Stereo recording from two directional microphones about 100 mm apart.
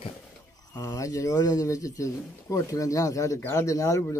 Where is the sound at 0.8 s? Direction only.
35° left (ahead or behind).